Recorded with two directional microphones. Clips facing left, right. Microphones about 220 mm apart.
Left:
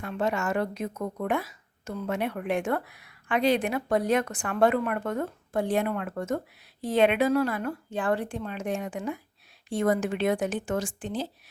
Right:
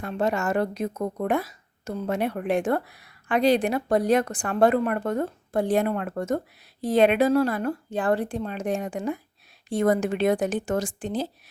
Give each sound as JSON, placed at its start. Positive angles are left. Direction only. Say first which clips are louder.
{"t": 0.0, "sound": "a woman's voice", "louder": "right 3 dB", "side_deg": -40}